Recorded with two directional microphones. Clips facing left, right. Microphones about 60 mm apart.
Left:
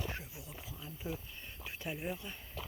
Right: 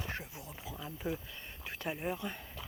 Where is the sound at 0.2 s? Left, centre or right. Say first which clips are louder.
Right 2 dB; right.